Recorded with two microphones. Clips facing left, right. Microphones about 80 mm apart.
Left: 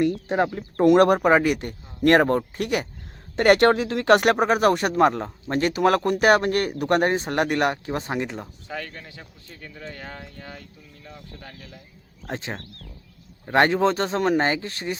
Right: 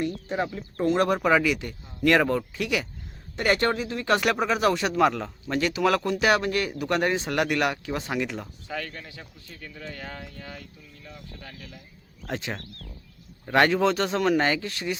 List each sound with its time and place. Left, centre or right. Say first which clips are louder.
0.0 s speech: left 6 dB; left
1.2 s speech: left 3 dB; left
3.3 s speech: left 7 dB; left
4.2 s speech: left 4 dB; left
8.6 s speech: even; centre; by 14.9 s left